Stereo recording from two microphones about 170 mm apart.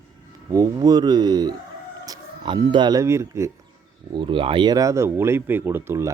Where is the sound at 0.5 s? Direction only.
20° right (ahead or behind).